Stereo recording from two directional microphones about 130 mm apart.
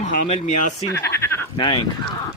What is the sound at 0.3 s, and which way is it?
Speech, 60° left (ahead or behind).